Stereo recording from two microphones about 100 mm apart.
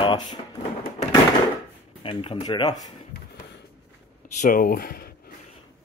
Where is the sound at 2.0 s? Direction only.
65° left (ahead or behind).